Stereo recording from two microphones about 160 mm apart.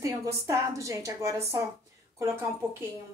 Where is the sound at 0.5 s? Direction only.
20° right (ahead or behind).